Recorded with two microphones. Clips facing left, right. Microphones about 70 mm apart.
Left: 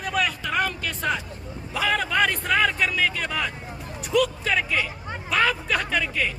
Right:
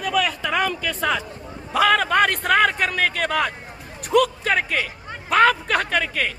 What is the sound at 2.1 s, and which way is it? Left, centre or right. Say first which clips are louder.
A man's voice: right 4 dB; right.